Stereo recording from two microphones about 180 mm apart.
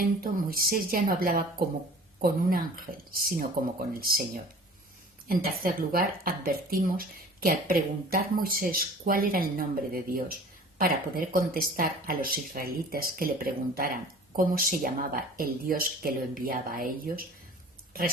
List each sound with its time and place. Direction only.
0.0 s speech: 55° right (ahead or behind)
5.3 s speech: 55° right (ahead or behind)